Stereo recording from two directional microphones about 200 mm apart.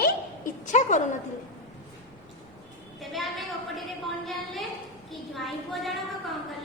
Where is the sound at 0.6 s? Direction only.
35° left (ahead or behind).